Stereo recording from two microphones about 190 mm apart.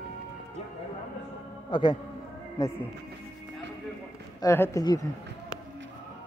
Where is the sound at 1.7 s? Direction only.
20° left (ahead or behind).